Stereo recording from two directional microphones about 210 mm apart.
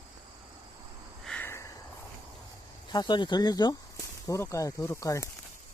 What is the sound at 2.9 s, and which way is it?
Speech, 20° left (ahead or behind).